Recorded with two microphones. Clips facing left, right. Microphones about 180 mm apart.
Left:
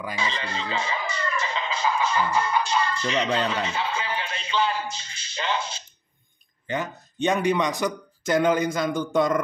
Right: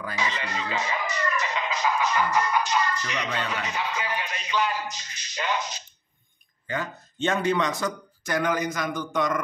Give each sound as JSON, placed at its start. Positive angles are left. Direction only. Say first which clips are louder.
{"t": 0.2, "sound": "speech", "louder": "right 1 dB", "side_deg": 30}
{"t": 6.7, "sound": "speech", "louder": "left 2 dB", "side_deg": 20}